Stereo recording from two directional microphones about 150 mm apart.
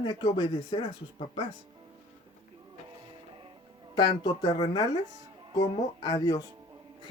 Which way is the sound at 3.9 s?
25° left (ahead or behind).